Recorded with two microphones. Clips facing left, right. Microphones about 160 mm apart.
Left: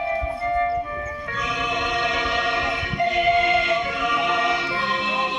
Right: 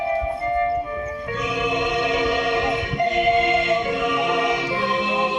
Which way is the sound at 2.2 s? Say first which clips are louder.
Right 4 dB; 45° right (ahead or behind).